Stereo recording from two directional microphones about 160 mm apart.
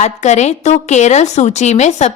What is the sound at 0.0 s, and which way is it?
A woman's voice, 45° left (ahead or behind).